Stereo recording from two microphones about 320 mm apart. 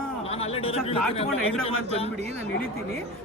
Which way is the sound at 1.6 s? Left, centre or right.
Centre.